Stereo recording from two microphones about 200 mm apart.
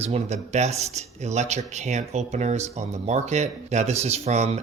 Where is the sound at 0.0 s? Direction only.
30° right (ahead or behind).